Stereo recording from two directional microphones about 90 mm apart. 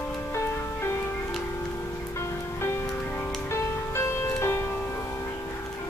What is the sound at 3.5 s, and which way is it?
Music, 35° left (ahead or behind).